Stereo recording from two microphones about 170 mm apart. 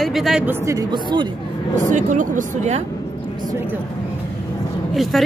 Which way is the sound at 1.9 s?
50° right (ahead or behind).